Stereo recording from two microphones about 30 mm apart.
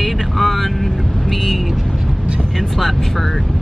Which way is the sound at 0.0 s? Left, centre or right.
Centre.